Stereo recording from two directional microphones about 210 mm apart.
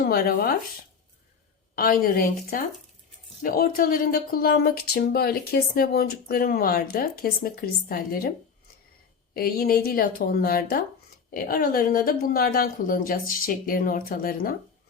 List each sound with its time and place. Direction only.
0.0 s speech: 45° left (ahead or behind)
1.7 s speech: 45° left (ahead or behind)
9.3 s speech: 45° left (ahead or behind)